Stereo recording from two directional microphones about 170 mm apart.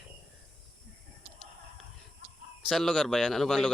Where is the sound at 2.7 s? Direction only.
Centre (ahead or behind).